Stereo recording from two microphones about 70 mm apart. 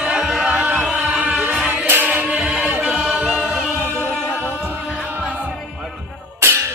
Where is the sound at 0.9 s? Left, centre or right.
Centre.